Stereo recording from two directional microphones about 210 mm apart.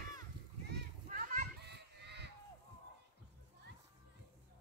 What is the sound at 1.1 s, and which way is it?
Children playing, 40° right (ahead or behind).